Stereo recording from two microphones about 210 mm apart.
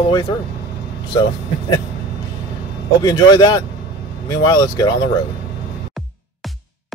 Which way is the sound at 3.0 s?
20° left (ahead or behind).